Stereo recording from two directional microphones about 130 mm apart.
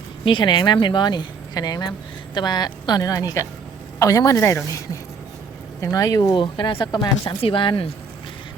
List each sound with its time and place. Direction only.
0.3 s speech: 35° left (ahead or behind)
5.8 s speech: 25° left (ahead or behind)
6.3 s speech: 40° left (ahead or behind)